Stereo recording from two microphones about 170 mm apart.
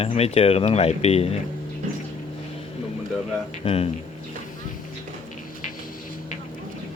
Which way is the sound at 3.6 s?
35° left (ahead or behind).